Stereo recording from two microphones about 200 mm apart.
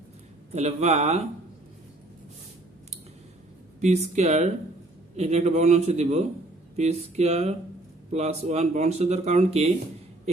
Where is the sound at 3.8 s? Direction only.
35° right (ahead or behind).